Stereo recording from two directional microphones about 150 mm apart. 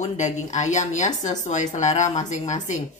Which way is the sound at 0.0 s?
55° left (ahead or behind).